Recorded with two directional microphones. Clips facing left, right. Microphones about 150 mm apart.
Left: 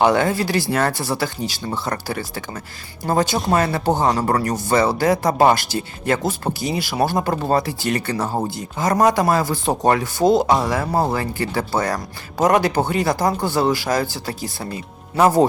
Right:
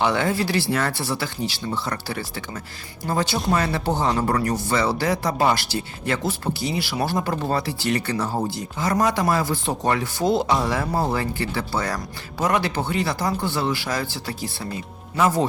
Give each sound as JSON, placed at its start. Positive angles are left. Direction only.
{"t": 0.0, "sound": "speech", "side_deg": 45}